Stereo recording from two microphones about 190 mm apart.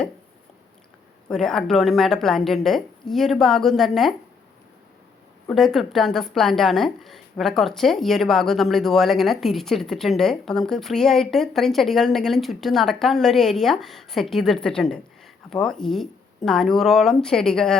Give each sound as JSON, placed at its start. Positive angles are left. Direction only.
{"t": 1.3, "sound": "a woman's voice", "side_deg": 5}
{"t": 5.5, "sound": "a woman's voice", "side_deg": 0}